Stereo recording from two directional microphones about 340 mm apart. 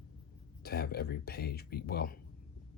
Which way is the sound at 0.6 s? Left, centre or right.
Left.